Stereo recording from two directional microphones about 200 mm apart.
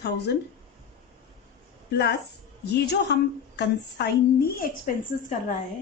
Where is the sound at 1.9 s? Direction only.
55° left (ahead or behind).